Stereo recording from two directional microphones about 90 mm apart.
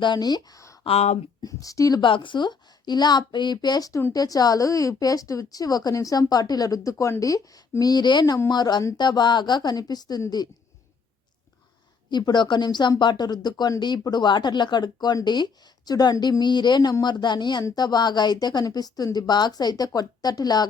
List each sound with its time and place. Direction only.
0.0 s a woman's voice: 55° left (ahead or behind)
2.0 s speech: 65° left (ahead or behind); by 10.5 s 45° left (ahead or behind)
12.1 s speech: 55° left (ahead or behind)
17.6 s speech: 45° left (ahead or behind)